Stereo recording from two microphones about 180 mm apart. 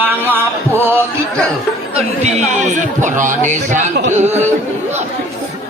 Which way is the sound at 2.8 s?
45° right (ahead or behind).